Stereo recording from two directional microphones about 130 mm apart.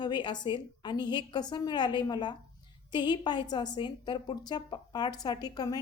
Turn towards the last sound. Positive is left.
turn(degrees=30)  # may be behind; listen again after turning